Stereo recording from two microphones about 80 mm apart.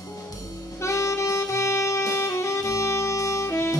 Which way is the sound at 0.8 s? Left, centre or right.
Left.